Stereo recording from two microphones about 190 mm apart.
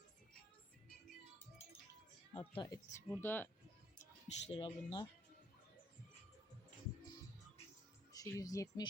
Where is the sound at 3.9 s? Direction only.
35° left (ahead or behind).